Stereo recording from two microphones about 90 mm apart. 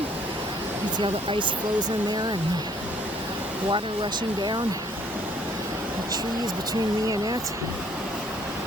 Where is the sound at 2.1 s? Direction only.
55° right (ahead or behind).